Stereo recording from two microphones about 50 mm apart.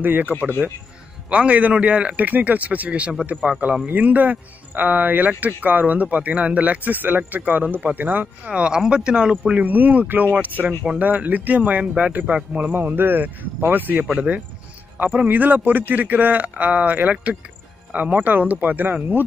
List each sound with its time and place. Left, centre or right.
0.0 s a man's voice: right
1.3 s a man's voice: right
8.5 s speech: centre
9.5 s a man's voice: right
12.1 s a man's voice: right
14.0 s a man's voice: right
15.2 s a man's voice: right